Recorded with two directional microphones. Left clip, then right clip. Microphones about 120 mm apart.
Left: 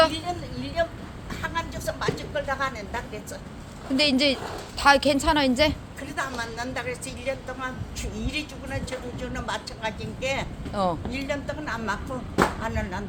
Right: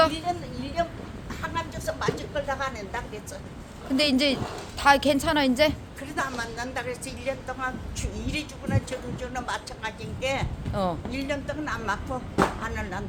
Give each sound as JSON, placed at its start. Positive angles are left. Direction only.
{"t": 0.3, "sound": "speech", "side_deg": -20}
{"t": 0.8, "sound": "vehicle", "side_deg": -15}
{"t": 1.3, "sound": "a sound", "side_deg": -10}
{"t": 3.9, "sound": "a woman's voice", "side_deg": 0}
{"t": 6.0, "sound": "speech", "side_deg": -25}
{"t": 10.8, "sound": "a woman's voice", "side_deg": 0}
{"t": 11.1, "sound": "speech", "side_deg": -20}